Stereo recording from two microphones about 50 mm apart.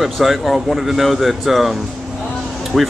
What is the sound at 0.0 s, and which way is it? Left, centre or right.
Speech, centre.